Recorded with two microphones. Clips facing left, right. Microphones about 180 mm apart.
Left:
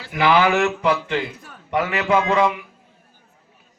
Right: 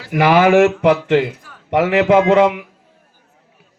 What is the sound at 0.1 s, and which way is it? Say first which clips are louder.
A man's voice: right 6 dB; 50° right (ahead or behind).